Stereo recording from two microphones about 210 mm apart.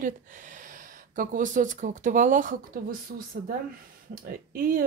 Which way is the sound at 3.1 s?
50° right (ahead or behind).